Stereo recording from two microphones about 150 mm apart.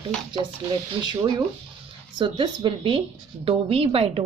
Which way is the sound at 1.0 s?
30° right (ahead or behind).